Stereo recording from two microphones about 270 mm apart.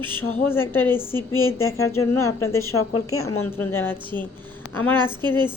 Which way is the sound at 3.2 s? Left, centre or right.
Left.